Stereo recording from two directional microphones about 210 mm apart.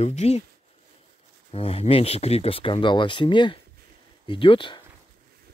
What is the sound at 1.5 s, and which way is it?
Speech, 25° left (ahead or behind).